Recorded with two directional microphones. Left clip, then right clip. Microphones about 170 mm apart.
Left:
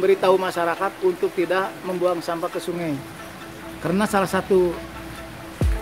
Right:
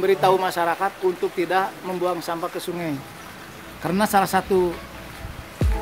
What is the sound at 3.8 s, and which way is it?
Speech, 20° right (ahead or behind).